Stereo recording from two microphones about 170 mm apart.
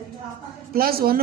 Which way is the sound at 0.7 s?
60° right (ahead or behind).